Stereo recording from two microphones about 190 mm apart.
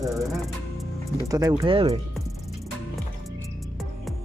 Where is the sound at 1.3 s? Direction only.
20° right (ahead or behind).